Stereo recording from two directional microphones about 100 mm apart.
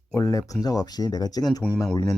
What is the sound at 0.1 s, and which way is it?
Speech, 35° left (ahead or behind).